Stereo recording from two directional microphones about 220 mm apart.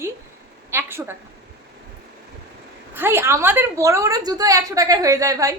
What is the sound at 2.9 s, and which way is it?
A woman's voice, 10° right (ahead or behind).